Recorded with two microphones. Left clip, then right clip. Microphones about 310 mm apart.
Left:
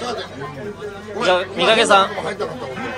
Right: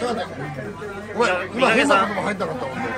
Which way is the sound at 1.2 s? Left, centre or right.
Centre.